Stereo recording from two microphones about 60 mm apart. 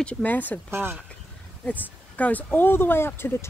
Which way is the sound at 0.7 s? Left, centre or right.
Right.